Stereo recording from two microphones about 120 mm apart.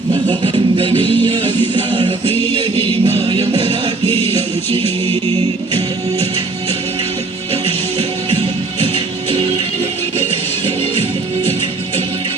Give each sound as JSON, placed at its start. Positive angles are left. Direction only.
{"t": 0.1, "sound": "music", "side_deg": -40}
{"t": 2.7, "sound": "music", "side_deg": 20}
{"t": 4.0, "sound": "music", "side_deg": 20}